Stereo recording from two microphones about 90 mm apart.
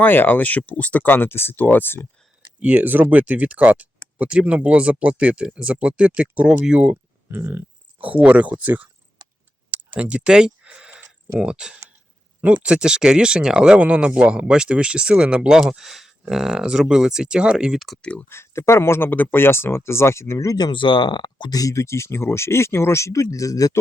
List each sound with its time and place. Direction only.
0.0 s speech: 20° left (ahead or behind)
2.6 s speech: 15° right (ahead or behind)
10.0 s speech: 10° right (ahead or behind)
18.0 s speech: 10° left (ahead or behind)
18.3 s speech: 30° left (ahead or behind)
20.6 s speech: 55° left (ahead or behind)
21.6 s speech: 35° left (ahead or behind)